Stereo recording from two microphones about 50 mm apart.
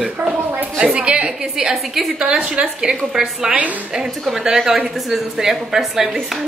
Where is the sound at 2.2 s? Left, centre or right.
Centre.